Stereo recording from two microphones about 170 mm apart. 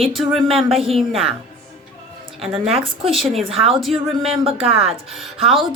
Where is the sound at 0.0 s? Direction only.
Centre (ahead or behind).